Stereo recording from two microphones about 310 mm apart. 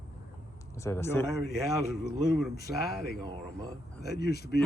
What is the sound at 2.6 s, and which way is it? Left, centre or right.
Speech, left.